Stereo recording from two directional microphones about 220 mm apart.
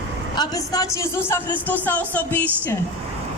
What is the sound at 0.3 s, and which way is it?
Speech, 15° left (ahead or behind).